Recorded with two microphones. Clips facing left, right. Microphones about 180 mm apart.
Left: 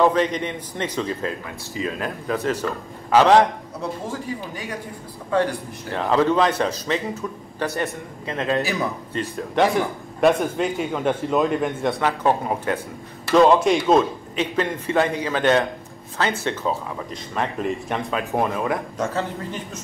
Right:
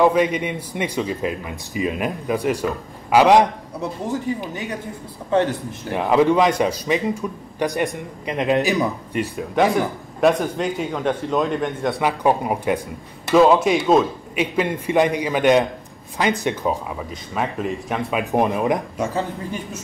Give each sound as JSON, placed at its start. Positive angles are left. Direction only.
{"t": 0.0, "sound": "a man's voice", "side_deg": -10}
{"t": 10.2, "sound": "a man's voice", "side_deg": 0}
{"t": 12.0, "sound": "a man's voice", "side_deg": -10}
{"t": 13.3, "sound": "a man's voice", "side_deg": -5}
{"t": 17.1, "sound": "a man's voice", "side_deg": -5}
{"t": 18.1, "sound": "a man's voice", "side_deg": -15}